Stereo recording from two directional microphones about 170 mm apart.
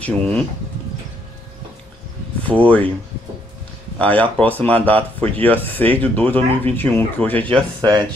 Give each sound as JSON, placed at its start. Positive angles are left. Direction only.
{"t": 0.0, "sound": "speech", "side_deg": 5}
{"t": 2.4, "sound": "speech", "side_deg": 10}
{"t": 4.0, "sound": "speech", "side_deg": 10}
{"t": 7.4, "sound": "speech", "side_deg": -25}